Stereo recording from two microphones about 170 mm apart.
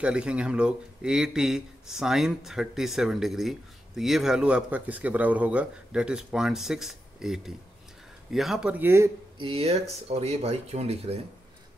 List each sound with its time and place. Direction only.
0.0 s speech: 5° right (ahead or behind)
9.4 s speech: 35° right (ahead or behind)